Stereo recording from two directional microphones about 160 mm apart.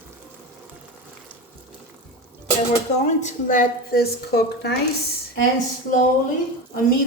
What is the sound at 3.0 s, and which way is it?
A woman's voice, 50° left (ahead or behind).